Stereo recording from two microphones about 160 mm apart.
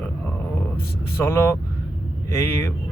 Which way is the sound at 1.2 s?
15° left (ahead or behind).